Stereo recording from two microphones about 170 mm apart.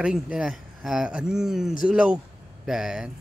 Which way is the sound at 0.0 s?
5° right (ahead or behind).